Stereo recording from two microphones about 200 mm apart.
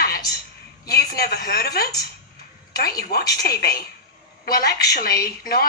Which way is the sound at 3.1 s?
50° left (ahead or behind).